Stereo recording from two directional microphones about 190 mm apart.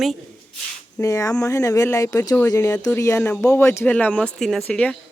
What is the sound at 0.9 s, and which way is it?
Speech, 15° left (ahead or behind).